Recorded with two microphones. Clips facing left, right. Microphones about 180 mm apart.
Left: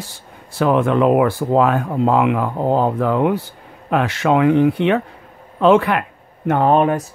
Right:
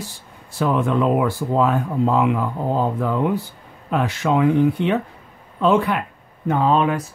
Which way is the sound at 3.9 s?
90° left.